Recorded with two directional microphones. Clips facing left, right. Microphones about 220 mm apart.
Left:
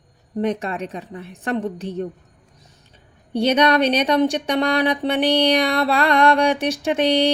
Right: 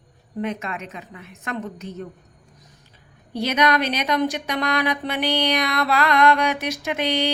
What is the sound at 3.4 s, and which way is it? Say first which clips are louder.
Speech: left 5 dB; 30° left (ahead or behind).